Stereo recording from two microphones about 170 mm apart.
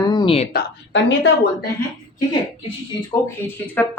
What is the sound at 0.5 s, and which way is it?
Speech, 90° left.